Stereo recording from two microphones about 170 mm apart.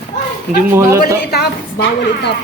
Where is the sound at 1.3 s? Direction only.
70° left (ahead or behind).